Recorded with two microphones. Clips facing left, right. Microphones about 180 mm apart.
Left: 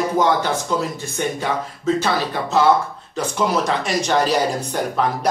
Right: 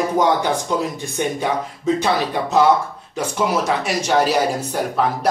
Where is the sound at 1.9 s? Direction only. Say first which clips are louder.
Right 3 dB; 15° right (ahead or behind).